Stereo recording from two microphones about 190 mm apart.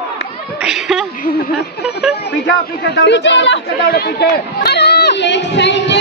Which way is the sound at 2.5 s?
65° left (ahead or behind).